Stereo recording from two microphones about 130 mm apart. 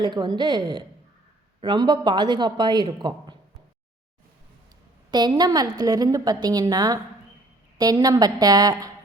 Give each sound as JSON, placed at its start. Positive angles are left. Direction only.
{"t": 0.0, "sound": "a woman's voice", "side_deg": -35}
{"t": 5.1, "sound": "a woman's voice", "side_deg": -30}